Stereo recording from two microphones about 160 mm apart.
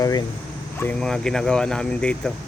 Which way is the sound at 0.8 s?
5° left (ahead or behind).